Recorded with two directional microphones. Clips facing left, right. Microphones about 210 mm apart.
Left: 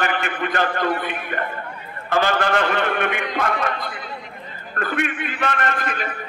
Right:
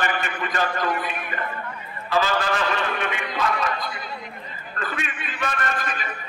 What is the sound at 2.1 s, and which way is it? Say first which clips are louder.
A man's voice: left 3 dB; 55° left (ahead or behind).